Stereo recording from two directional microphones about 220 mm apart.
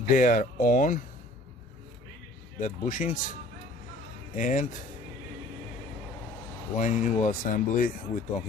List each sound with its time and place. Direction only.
0.1 s speech: 35° left (ahead or behind)
2.6 s speech: 35° left (ahead or behind)
4.4 s speech: 35° left (ahead or behind)
6.7 s speech: 35° left (ahead or behind)